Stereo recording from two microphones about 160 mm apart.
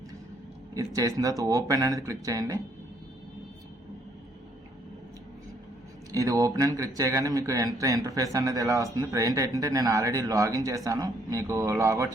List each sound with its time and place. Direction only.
0.7 s speech: 20° right (ahead or behind)
6.1 s speech: 20° right (ahead or behind)